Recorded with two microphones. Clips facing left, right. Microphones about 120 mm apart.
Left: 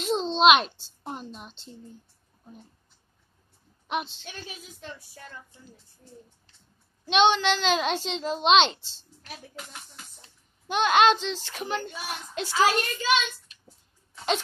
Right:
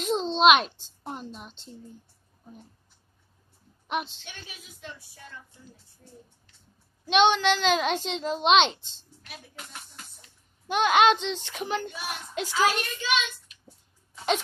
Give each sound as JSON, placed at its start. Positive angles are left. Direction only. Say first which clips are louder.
{"t": 0.0, "sound": "a sound", "louder": "even", "side_deg": -5}
{"t": 3.8, "sound": "a woman's voice", "louder": "even", "side_deg": 0}
{"t": 7.1, "sound": "a child's voice", "louder": "even", "side_deg": -5}
{"t": 10.7, "sound": "a child's voice", "louder": "even", "side_deg": -10}
{"t": 11.6, "sound": "a child's voice", "louder": "right 1 dB", "side_deg": -5}
{"t": 12.4, "sound": "a child's voice", "louder": "left 2 dB", "side_deg": 40}